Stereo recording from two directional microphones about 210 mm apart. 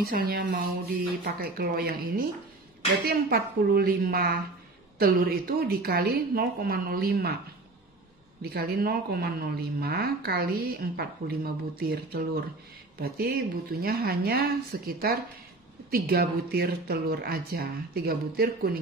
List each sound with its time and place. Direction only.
0.0 s a woman's voice: 45° right (ahead or behind)
8.4 s a woman's voice: 50° right (ahead or behind)